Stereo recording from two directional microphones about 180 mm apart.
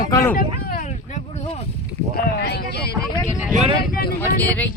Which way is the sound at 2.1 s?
60° left (ahead or behind).